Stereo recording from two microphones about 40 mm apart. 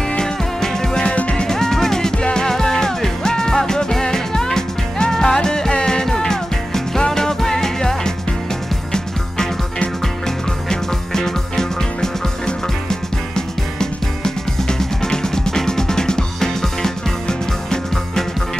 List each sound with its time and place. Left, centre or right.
0.2 s music: centre
1.0 s music: left
1.3 s music: centre
10.2 s music: centre
13.7 s music: centre